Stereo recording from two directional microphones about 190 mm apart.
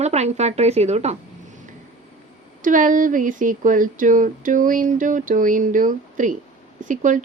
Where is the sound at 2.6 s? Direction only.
45° right (ahead or behind).